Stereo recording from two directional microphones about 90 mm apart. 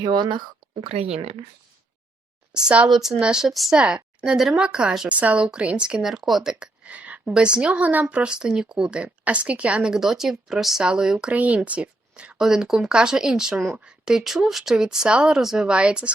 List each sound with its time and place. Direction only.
0.0 s speech: 55° right (ahead or behind)
1.0 s speech: 90° right
2.5 s a woman's voice: 10° right (ahead or behind)